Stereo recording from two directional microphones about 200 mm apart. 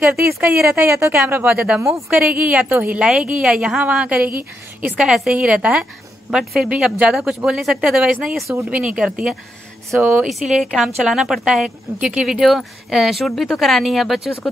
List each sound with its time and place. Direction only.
0.3 s speech: 10° right (ahead or behind)